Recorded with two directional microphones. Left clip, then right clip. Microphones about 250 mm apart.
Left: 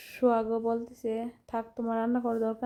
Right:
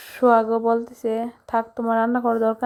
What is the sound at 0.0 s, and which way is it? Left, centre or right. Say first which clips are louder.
A woman's voice: right 10 dB; centre.